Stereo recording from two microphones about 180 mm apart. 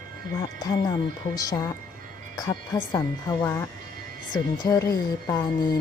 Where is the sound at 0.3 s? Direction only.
20° left (ahead or behind).